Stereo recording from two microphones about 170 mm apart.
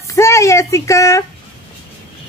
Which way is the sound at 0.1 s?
15° left (ahead or behind).